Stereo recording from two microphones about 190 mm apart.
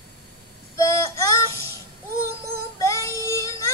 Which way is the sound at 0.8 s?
15° left (ahead or behind).